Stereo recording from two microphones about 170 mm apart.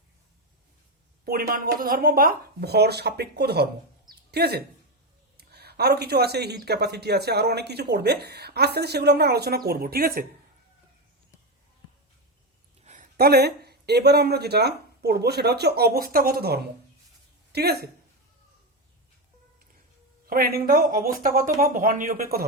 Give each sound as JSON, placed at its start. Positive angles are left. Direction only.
{"t": 1.2, "sound": "speech", "side_deg": -60}
{"t": 12.8, "sound": "a sound", "side_deg": -45}
{"t": 13.1, "sound": "speech", "side_deg": -70}
{"t": 20.2, "sound": "speech", "side_deg": -60}